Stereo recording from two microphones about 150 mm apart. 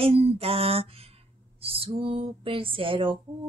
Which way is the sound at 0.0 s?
40° right (ahead or behind).